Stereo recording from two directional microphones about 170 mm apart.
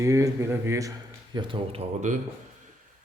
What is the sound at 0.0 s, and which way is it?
Speech, 20° right (ahead or behind).